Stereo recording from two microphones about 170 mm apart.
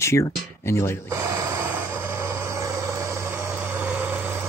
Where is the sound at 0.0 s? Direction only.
15° left (ahead or behind).